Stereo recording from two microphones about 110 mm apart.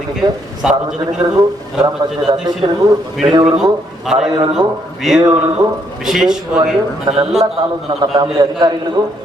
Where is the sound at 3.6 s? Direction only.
5° right (ahead or behind).